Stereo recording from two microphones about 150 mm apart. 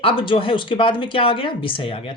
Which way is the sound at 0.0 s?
35° left (ahead or behind).